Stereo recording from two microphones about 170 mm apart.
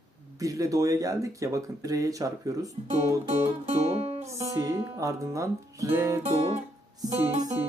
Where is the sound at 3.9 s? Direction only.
35° right (ahead or behind).